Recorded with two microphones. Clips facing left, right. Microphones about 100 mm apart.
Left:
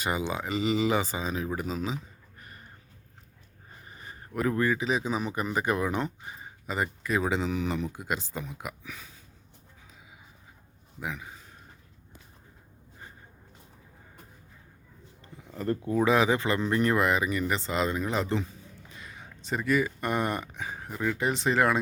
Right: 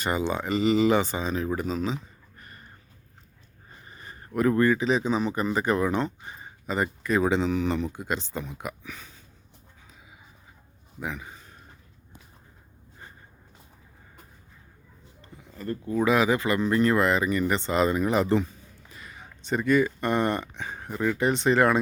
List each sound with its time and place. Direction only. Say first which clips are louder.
0.0 s speech: right 3 dB; 5° left (ahead or behind)
3.8 s speech: right 1 dB; 10° left (ahead or behind)
11.0 s a man's voice: right 2 dB; centre (ahead or behind)
15.5 s speech: left 3 dB; 60° left (ahead or behind)
15.8 s speech: right 1 dB; 10° left (ahead or behind)
16.0 s speech: right 2 dB; 25° left (ahead or behind); by 21.8 s centre (ahead or behind)